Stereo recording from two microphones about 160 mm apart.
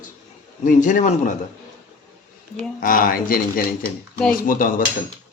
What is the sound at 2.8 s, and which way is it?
Speech, 60° left (ahead or behind).